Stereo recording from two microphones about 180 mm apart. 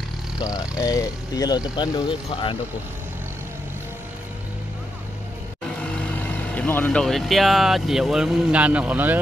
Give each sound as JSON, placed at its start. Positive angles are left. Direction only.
{"t": 0.4, "sound": "speech", "side_deg": 20}
{"t": 6.2, "sound": "speech", "side_deg": 10}